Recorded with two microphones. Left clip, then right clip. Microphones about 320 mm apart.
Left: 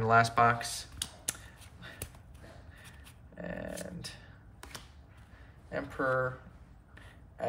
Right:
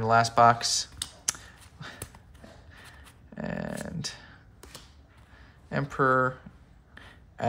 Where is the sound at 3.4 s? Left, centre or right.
Centre.